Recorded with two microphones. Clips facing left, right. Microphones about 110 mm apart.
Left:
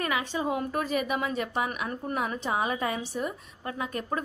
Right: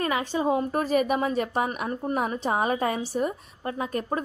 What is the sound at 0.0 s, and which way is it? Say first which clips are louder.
A woman's voice: right 4 dB; 35° right (ahead or behind).